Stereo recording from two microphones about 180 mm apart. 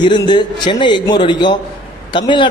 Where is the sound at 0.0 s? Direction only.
25° left (ahead or behind).